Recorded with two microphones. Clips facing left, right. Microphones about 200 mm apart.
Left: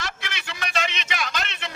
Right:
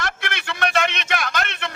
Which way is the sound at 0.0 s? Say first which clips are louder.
Right 6 dB; 55° right (ahead or behind).